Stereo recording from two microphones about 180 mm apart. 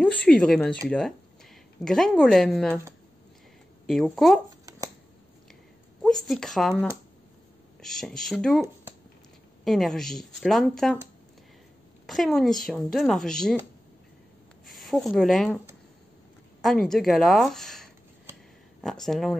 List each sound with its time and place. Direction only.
0.0 s speech: 5° left (ahead or behind)
3.8 s speech: centre (ahead or behind)
4.6 s shuffling cards: 20° right (ahead or behind)
6.0 s speech: centre (ahead or behind)
9.7 s speech: centre (ahead or behind)
12.1 s speech: centre (ahead or behind)
14.7 s speech: centre (ahead or behind)
16.6 s speech: centre (ahead or behind)